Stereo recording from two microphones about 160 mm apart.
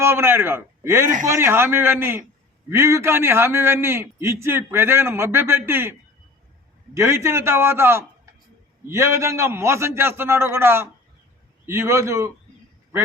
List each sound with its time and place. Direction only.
0.0 s a man's voice: 15° right (ahead or behind)